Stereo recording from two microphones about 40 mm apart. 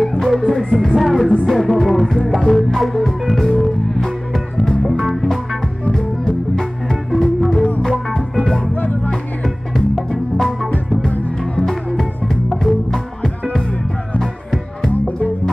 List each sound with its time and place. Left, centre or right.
0.0 s music: centre
0.7 s music: centre
5.9 s music: centre
8.7 s music: left
9.9 s music: centre